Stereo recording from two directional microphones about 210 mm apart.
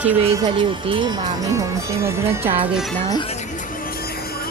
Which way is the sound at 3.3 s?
35° left (ahead or behind).